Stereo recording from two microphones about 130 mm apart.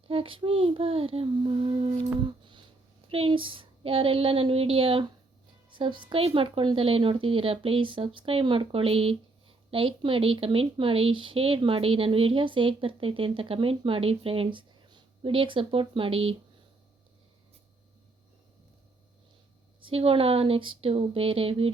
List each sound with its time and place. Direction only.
0.1 s speech: 45° right (ahead or behind)
2.4 s a sound: 35° right (ahead or behind)
3.1 s speech: 45° right (ahead or behind)
19.8 s speech: 45° right (ahead or behind)